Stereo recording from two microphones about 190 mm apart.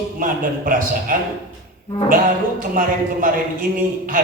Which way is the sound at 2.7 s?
45° right (ahead or behind).